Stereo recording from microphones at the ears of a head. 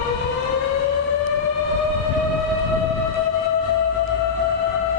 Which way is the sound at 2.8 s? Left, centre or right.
Left.